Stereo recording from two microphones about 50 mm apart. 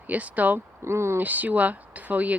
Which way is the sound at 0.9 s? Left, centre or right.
Right.